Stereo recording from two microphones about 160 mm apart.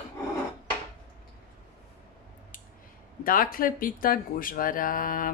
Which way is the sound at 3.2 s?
60° left (ahead or behind).